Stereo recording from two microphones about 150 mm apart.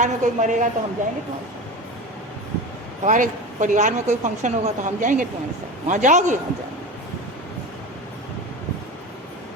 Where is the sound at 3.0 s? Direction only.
55° right (ahead or behind).